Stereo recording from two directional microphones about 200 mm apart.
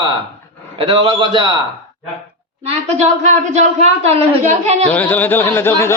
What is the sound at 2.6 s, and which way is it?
Speech, 35° right (ahead or behind).